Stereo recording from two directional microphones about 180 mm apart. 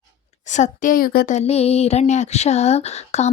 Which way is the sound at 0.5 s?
45° left (ahead or behind).